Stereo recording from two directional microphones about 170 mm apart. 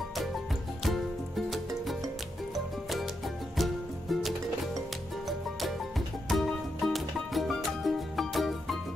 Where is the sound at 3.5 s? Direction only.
Centre (ahead or behind).